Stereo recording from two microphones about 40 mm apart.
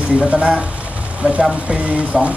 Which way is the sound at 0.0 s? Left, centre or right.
Right.